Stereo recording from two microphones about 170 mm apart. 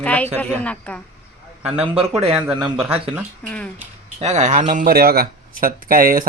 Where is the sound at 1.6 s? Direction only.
5° right (ahead or behind).